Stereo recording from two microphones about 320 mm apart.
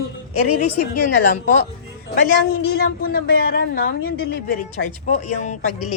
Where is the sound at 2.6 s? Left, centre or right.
Left.